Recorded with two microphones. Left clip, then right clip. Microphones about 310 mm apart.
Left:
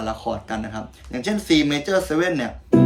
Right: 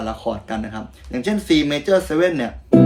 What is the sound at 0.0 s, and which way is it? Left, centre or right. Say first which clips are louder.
Speech: right 1 dB; centre.